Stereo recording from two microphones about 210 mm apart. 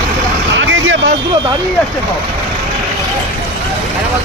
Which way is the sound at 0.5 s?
65° right (ahead or behind).